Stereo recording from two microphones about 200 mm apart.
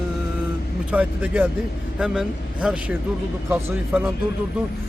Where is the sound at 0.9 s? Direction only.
5° right (ahead or behind).